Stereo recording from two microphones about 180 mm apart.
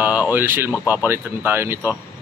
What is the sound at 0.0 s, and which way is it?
Speech, 10° right (ahead or behind).